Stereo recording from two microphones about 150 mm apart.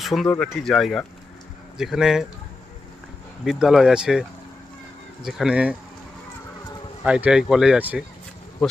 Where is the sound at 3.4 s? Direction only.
Centre (ahead or behind).